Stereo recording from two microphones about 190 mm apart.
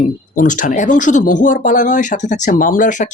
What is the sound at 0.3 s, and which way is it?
Speech, 45° left (ahead or behind).